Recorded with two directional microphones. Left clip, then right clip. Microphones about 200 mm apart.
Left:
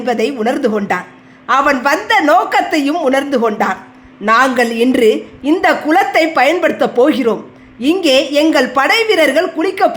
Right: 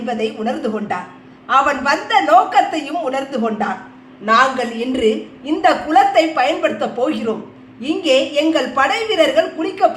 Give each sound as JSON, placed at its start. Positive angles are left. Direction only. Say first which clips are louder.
{"t": 0.0, "sound": "a woman's voice", "louder": "left 6 dB", "side_deg": 50}